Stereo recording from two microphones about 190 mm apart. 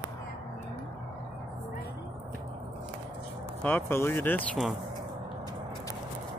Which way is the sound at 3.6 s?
10° left (ahead or behind).